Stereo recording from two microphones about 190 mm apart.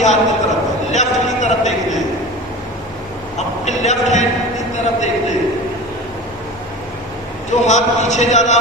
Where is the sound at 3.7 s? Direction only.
40° left (ahead or behind).